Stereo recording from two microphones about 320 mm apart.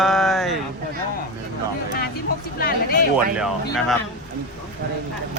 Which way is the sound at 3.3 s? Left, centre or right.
Centre.